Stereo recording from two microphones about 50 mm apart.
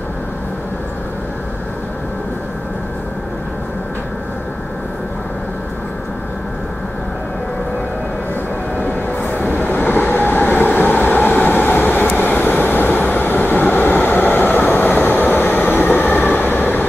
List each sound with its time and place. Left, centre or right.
9.2 s vehicle: left